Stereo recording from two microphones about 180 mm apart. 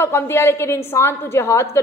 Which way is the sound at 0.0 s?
15° left (ahead or behind).